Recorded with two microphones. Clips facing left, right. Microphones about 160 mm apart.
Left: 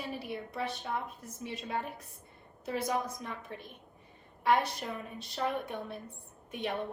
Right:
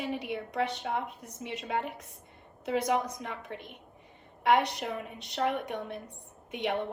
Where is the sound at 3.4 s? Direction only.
20° right (ahead or behind).